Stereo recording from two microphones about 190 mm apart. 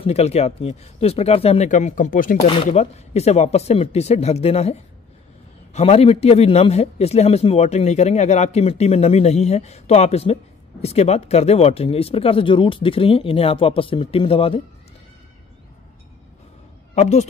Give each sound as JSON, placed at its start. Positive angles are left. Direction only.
{"t": 0.0, "sound": "a man's voice", "side_deg": 35}
{"t": 2.4, "sound": "a man's voice", "side_deg": 30}
{"t": 16.9, "sound": "a man's voice", "side_deg": 35}